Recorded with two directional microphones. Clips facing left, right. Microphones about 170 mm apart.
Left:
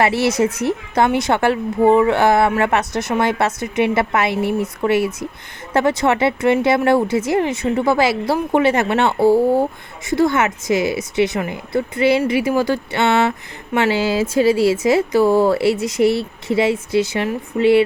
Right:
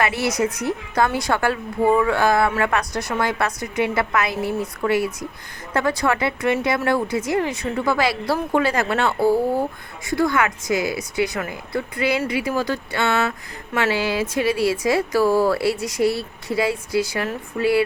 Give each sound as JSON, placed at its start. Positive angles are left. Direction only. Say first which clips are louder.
{"t": 0.0, "sound": "speech", "louder": "left 5 dB", "side_deg": 30}